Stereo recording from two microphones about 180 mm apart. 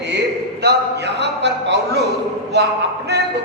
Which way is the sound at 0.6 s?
65° right (ahead or behind).